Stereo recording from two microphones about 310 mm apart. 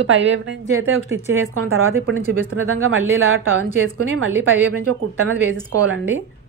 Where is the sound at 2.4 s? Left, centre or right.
Right.